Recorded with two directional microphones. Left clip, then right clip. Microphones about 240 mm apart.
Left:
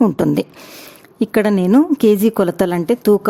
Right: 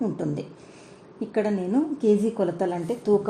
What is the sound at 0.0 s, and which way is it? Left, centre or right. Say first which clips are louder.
A woman's voice: left 13 dB; left.